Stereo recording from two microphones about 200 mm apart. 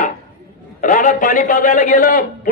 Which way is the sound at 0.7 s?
40° left (ahead or behind).